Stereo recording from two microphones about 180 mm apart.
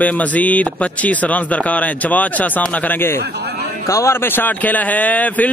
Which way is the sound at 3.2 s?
65° right (ahead or behind).